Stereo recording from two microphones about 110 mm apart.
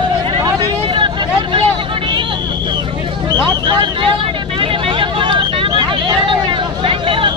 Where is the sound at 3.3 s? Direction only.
45° right (ahead or behind).